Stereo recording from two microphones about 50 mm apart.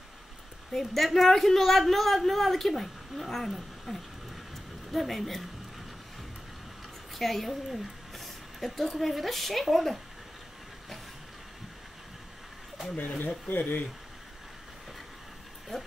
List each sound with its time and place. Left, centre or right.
0.7 s a woman's voice: centre
7.2 s speech: centre
13.5 s speech: left
15.7 s speech: centre